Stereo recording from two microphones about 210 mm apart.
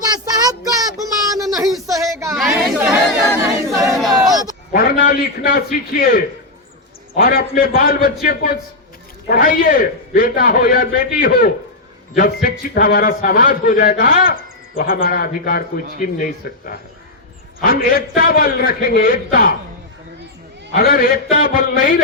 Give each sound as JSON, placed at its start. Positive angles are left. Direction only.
{"t": 0.0, "sound": "child singing", "side_deg": -15}
{"t": 1.9, "sound": "a sound", "side_deg": -15}
{"t": 2.3, "sound": "chatter", "side_deg": 0}
{"t": 3.7, "sound": "crowd", "side_deg": 0}
{"t": 4.3, "sound": "a sound", "side_deg": -20}
{"t": 4.7, "sound": "a man's voice", "side_deg": 40}
{"t": 20.7, "sound": "a man's voice", "side_deg": 45}